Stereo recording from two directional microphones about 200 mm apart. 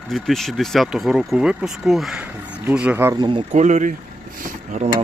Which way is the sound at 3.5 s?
35° right (ahead or behind).